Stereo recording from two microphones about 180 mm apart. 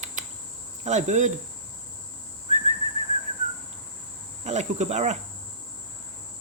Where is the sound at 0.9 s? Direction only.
40° right (ahead or behind).